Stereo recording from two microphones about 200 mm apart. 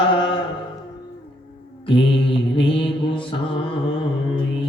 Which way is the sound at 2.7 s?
25° left (ahead or behind).